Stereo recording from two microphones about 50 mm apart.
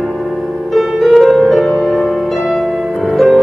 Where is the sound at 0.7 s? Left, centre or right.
Centre.